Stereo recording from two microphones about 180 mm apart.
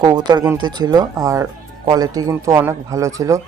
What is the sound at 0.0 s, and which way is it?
Speech, 25° right (ahead or behind).